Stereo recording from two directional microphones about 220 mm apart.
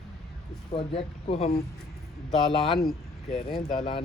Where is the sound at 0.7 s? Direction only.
25° left (ahead or behind).